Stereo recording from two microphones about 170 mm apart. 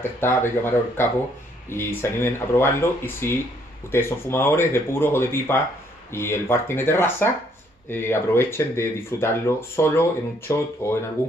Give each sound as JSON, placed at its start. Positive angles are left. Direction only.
{"t": 0.2, "sound": "speech", "side_deg": 15}